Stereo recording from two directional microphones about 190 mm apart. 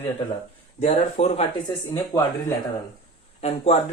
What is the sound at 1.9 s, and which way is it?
Speech, 20° left (ahead or behind).